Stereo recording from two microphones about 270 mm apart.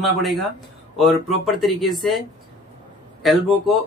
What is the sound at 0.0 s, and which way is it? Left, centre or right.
Speech, centre.